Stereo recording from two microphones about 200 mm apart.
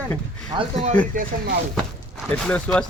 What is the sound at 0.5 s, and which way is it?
Speech, 35° right (ahead or behind).